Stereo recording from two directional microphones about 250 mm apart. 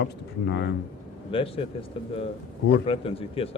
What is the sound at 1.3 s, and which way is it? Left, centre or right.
Speech, left.